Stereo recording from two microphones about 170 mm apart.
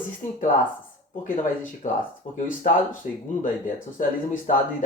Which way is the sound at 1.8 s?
40° left (ahead or behind).